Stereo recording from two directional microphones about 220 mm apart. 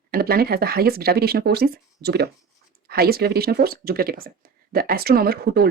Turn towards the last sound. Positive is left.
turn(degrees=-45)  # may be behind; listen again after turning